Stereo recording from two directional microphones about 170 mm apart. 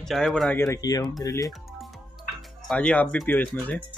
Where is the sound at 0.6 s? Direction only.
20° left (ahead or behind).